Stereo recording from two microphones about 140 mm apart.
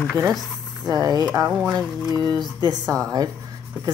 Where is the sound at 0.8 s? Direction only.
25° right (ahead or behind).